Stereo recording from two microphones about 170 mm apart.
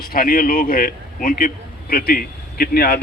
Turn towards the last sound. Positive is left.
turn(degrees=70)  # may be behind; listen again after turning